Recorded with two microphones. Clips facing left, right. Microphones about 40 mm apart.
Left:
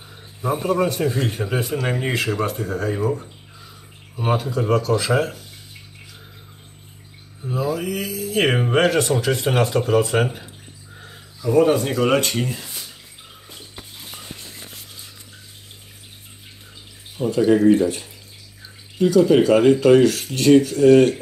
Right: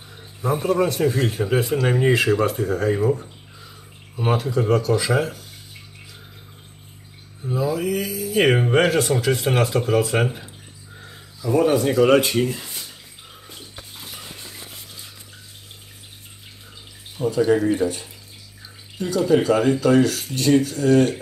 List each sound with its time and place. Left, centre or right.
0.4 s speech: centre
4.2 s speech: centre
4.8 s speech: centre
7.4 s speech: centre
13.5 s a sound: centre
17.2 s speech: centre
18.9 s speech: centre